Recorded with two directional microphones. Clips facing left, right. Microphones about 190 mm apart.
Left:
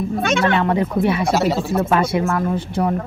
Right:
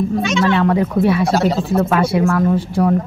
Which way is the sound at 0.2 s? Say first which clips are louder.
Left 1 dB; 55° left (ahead or behind).